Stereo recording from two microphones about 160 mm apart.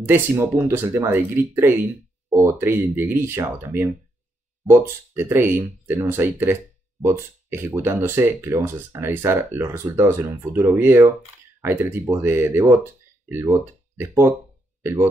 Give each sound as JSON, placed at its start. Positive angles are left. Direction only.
{"t": 0.0, "sound": "speech", "side_deg": -15}